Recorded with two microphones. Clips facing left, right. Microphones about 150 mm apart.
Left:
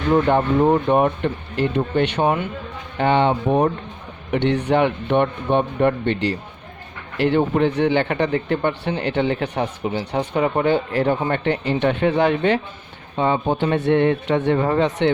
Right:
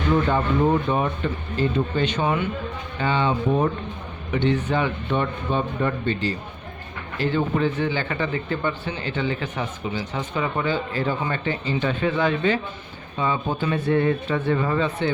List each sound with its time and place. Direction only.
0.1 s speech: 60° left (ahead or behind)
3.0 s speech: 70° left (ahead or behind)
14.5 s speech: 40° left (ahead or behind)
14.8 s speech: 85° left